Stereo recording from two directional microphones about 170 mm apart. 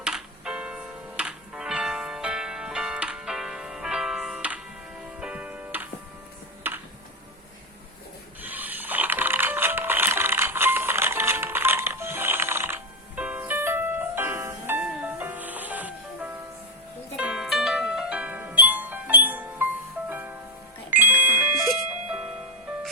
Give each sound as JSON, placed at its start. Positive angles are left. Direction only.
{"t": 0.0, "sound": "music", "side_deg": -5}
{"t": 8.4, "sound": "music", "side_deg": -10}
{"t": 21.6, "sound": "music", "side_deg": 0}